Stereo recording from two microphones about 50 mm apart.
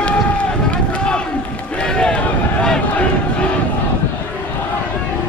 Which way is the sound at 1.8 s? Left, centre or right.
Centre.